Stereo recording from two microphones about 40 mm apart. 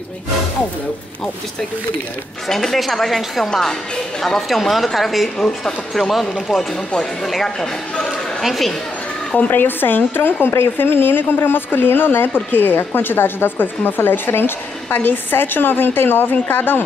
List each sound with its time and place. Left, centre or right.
2.4 s speech: centre
4.2 s speech: centre
9.4 s speech: left